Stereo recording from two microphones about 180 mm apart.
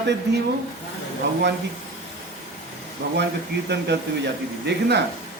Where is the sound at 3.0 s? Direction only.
65° right (ahead or behind).